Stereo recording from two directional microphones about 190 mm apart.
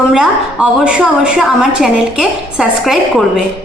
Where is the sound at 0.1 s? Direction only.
5° right (ahead or behind).